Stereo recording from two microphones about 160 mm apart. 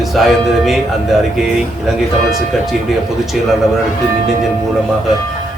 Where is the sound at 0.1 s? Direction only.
Centre (ahead or behind).